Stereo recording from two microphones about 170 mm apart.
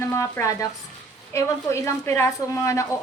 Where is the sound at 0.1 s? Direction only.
15° left (ahead or behind).